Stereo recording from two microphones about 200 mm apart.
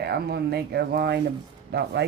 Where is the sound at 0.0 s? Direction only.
55° right (ahead or behind).